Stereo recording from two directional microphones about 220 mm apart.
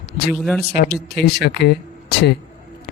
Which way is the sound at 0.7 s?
45° left (ahead or behind).